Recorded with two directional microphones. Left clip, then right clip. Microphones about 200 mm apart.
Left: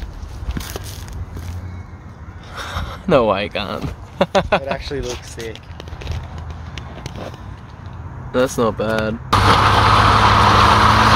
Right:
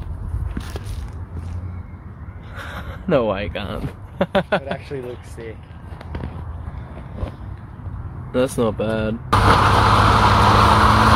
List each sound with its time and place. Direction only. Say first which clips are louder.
0.6 s a sound: left 4 dB; 40° left (ahead or behind)
2.5 s speech: left 5 dB; 15° left (ahead or behind)
4.7 s speech: left 4 dB; 40° left (ahead or behind)
8.3 s speech: left 3 dB; centre (ahead or behind)
9.3 s vehicle: left 2 dB; 30° left (ahead or behind)
10.5 s vehicle: left 2 dB; centre (ahead or behind)
10.8 s vehicle: left 2 dB; 30° left (ahead or behind)